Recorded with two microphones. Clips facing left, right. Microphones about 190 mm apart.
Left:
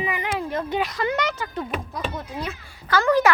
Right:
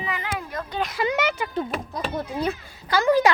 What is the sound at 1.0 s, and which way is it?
Speech, 10° right (ahead or behind).